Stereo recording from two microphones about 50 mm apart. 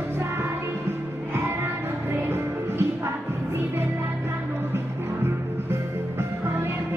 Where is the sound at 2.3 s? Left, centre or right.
Right.